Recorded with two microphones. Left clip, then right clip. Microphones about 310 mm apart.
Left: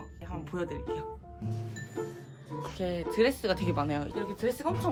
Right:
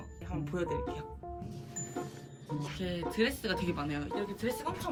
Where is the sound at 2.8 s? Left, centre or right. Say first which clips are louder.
Left 6 dB; left.